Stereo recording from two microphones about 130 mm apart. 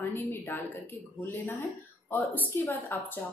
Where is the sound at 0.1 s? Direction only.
20° left (ahead or behind).